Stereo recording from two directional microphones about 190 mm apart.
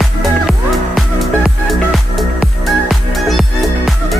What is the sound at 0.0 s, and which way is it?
Music, centre (ahead or behind).